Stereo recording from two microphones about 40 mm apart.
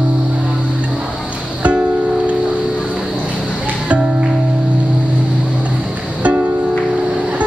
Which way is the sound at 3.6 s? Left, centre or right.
Right.